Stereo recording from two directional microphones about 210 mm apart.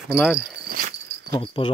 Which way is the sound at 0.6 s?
40° right (ahead or behind).